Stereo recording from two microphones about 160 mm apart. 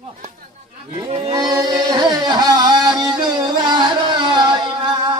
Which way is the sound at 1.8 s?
25° right (ahead or behind).